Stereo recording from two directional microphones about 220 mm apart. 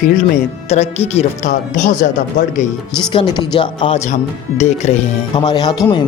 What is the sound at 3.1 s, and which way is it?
Speech, 20° left (ahead or behind).